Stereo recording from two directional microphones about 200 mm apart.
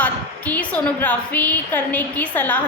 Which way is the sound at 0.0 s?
10° left (ahead or behind).